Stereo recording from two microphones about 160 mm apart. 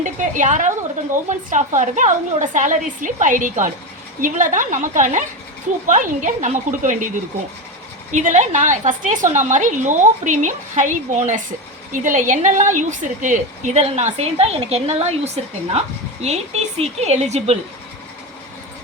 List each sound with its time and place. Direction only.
0.0 s a woman's voice: 50° right (ahead or behind)
8.1 s a woman's voice: 50° right (ahead or behind)